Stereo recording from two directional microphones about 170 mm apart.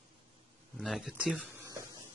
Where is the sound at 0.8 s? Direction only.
Centre (ahead or behind); by 1.9 s 15° right (ahead or behind).